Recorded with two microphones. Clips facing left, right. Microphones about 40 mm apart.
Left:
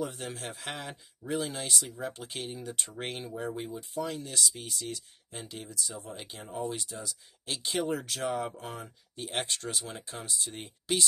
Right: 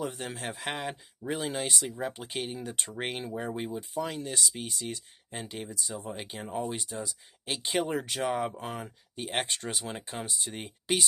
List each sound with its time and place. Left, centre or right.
0.0 s speech: right